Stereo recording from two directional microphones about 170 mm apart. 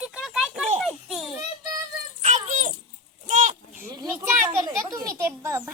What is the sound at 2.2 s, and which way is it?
A child's voice, 45° right (ahead or behind).